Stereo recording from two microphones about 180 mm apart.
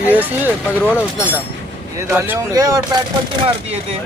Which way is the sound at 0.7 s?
15° left (ahead or behind).